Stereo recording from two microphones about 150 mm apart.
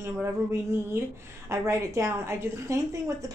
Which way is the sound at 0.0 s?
15° right (ahead or behind).